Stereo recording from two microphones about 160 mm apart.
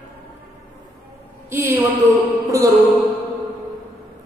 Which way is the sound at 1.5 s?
15° right (ahead or behind).